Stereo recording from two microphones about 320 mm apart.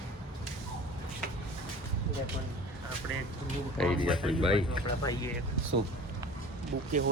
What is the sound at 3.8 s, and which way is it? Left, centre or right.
Speech, centre.